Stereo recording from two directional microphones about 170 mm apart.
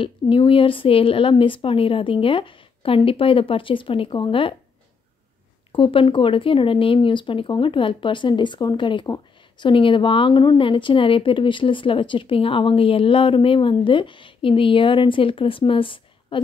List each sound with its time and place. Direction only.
0.0 s speech: 30° left (ahead or behind)
5.7 s speech: 30° left (ahead or behind)